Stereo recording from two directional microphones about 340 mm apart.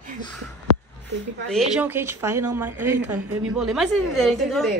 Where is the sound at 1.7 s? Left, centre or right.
Centre.